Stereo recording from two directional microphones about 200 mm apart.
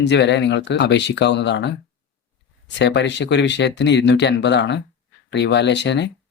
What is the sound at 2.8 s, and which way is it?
Speech, 60° left (ahead or behind).